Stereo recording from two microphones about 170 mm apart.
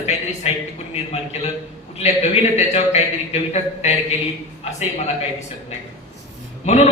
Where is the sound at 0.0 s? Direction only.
40° left (ahead or behind).